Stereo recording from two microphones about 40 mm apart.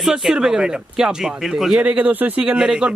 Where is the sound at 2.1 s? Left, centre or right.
Right.